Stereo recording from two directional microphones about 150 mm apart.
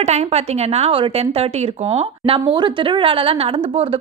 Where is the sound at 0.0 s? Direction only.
45° right (ahead or behind).